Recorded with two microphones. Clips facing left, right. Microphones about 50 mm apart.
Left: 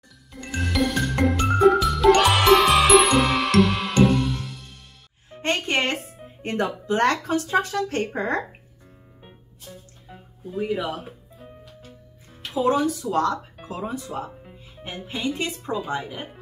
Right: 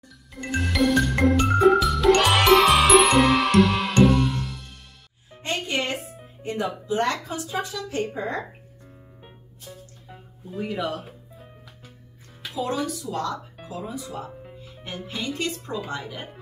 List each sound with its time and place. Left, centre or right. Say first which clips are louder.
0.6 s music: right 2 dB; centre
5.4 s music: left 4 dB; left
6.4 s speech: left 2 dB; left
9.2 s music: left 1 dB; centre
12.5 s speech: left 6 dB; left
14.0 s speech: left 3 dB; left
14.8 s speech: left 2 dB; centre